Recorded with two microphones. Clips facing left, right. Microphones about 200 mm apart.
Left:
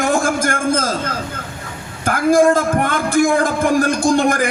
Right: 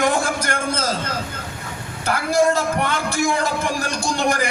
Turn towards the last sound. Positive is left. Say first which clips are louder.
# left 6 dB
turn(degrees=50)  # may be behind; listen again after turning